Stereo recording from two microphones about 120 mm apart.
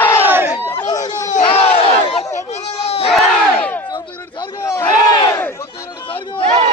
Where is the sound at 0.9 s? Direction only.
30° left (ahead or behind).